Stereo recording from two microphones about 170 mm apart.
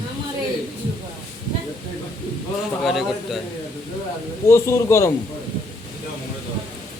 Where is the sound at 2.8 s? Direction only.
Centre (ahead or behind).